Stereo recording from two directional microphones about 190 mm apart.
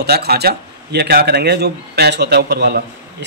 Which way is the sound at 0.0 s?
55° right (ahead or behind).